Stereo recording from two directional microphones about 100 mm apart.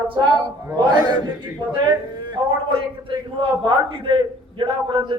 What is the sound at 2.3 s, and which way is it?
A man's voice, 60° right (ahead or behind).